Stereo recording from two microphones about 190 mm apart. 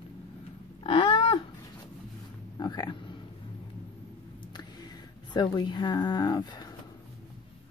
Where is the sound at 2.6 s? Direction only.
20° left (ahead or behind).